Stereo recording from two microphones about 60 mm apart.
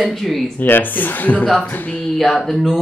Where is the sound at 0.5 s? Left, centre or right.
Left.